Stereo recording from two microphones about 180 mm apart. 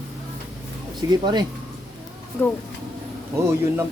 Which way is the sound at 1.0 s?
20° right (ahead or behind).